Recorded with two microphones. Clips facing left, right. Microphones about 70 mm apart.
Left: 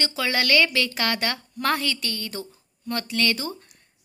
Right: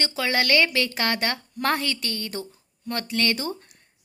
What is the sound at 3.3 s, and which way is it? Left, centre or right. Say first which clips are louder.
Speech: right 2 dB; right.